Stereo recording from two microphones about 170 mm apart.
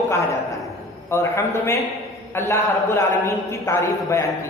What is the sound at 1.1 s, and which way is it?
A man's voice, 15° left (ahead or behind).